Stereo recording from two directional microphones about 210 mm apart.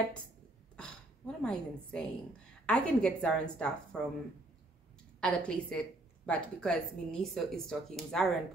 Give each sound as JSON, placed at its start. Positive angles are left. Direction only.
{"t": 0.7, "sound": "a woman's voice", "side_deg": 5}
{"t": 5.2, "sound": "a woman's voice", "side_deg": 5}